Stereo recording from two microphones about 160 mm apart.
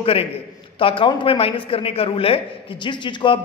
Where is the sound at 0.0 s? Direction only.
35° left (ahead or behind).